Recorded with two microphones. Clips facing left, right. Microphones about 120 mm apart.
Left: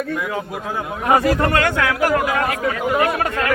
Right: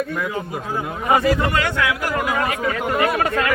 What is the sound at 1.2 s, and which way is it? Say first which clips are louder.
Speech: left 2 dB; 50° left (ahead or behind).